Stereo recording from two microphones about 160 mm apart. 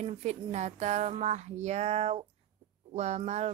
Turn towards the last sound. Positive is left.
turn(degrees=-45)  # may be behind; listen again after turning